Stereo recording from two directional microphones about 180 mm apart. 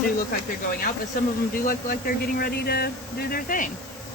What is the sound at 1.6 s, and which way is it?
Speech, 55° left (ahead or behind).